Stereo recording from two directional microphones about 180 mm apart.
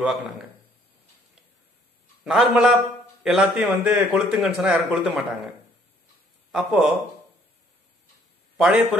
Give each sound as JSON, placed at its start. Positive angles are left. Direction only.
{"t": 2.2, "sound": "a man's voice", "side_deg": -5}
{"t": 6.5, "sound": "speech", "side_deg": -5}
{"t": 8.5, "sound": "a man's voice", "side_deg": 0}